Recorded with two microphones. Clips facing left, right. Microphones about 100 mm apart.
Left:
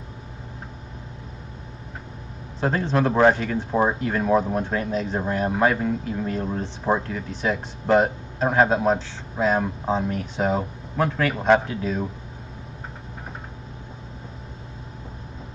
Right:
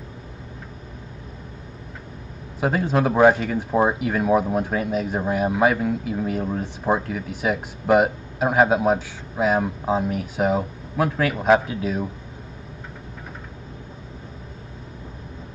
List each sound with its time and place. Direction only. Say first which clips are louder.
2.6 s speech: right 1 dB; 10° right (ahead or behind)